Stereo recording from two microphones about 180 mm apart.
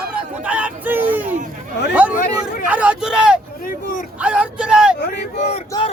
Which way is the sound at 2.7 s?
5° right (ahead or behind).